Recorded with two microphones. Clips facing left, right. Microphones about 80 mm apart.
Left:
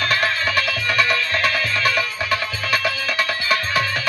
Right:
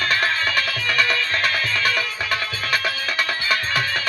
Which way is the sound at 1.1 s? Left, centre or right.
Right.